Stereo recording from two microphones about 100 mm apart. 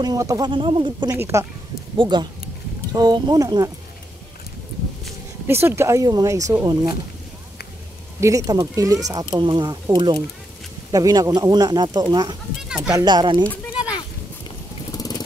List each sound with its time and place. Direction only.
0.0 s speech: 35° right (ahead or behind)
0.5 s speech: 55° right (ahead or behind)
1.1 s speech: 25° right (ahead or behind)
2.0 s speech: 50° right (ahead or behind)
5.5 s speech: 25° right (ahead or behind); by 7.0 s 45° right (ahead or behind)
8.2 s speech: 35° right (ahead or behind)
9.4 s speech: 50° right (ahead or behind)
10.9 s speech: 40° right (ahead or behind)
12.6 s speech: 5° right (ahead or behind)
12.9 s speech: 45° right (ahead or behind)
15.0 s vehicle: 40° left (ahead or behind)